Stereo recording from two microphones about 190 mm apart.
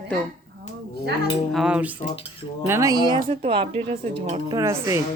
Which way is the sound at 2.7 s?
15° right (ahead or behind).